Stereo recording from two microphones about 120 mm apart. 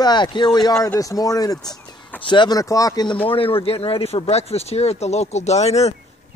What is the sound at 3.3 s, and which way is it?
Speech, 50° left (ahead or behind).